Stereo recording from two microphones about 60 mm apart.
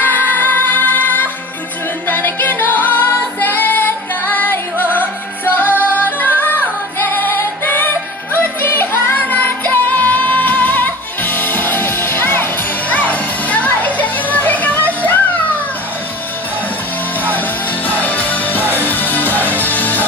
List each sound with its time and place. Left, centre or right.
0.0 s music: left
18.0 s music: left